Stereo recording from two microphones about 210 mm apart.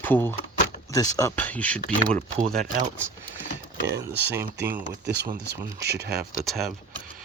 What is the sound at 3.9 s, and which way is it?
Speech, 10° right (ahead or behind).